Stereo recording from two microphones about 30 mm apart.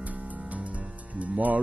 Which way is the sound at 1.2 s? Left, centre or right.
Right.